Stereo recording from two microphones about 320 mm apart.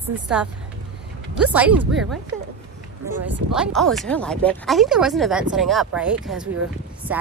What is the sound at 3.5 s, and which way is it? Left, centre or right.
Speech, centre.